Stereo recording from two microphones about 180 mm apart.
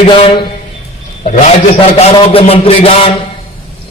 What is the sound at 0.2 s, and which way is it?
Music, 30° left (ahead or behind).